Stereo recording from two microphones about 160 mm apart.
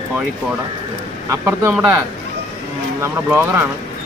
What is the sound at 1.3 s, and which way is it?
Speech, 15° right (ahead or behind).